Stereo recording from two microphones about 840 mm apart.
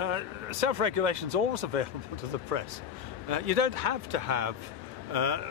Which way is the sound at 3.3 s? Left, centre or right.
Right.